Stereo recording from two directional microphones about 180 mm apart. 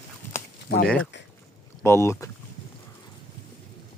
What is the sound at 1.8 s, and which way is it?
Speech, 15° left (ahead or behind).